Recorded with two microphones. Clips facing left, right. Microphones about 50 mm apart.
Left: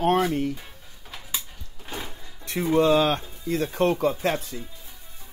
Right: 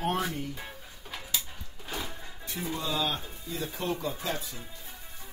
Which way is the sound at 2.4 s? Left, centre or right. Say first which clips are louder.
Left 14 dB; left.